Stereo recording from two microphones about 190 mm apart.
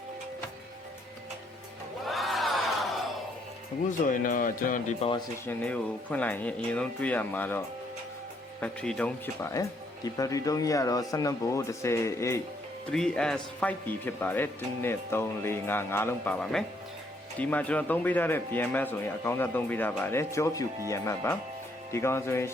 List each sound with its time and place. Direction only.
2.0 s crowd: centre (ahead or behind)
4.0 s speech: 45° left (ahead or behind)
5.5 s speech: 5° left (ahead or behind)
8.6 s speech: 5° left (ahead or behind)
12.9 s speech: 5° left (ahead or behind)